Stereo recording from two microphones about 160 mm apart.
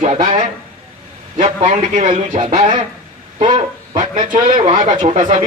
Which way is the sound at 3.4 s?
30° right (ahead or behind).